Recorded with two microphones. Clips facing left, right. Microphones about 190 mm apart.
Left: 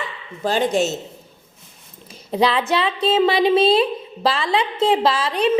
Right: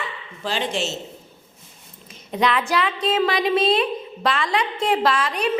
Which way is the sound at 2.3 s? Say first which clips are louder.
Left 3 dB; 30° left (ahead or behind).